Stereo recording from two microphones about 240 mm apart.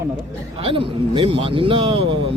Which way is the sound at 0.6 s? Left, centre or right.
Right.